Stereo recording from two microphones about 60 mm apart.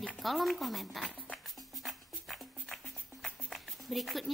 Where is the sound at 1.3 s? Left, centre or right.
Centre.